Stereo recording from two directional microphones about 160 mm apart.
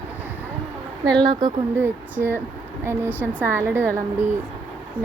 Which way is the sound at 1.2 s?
25° right (ahead or behind).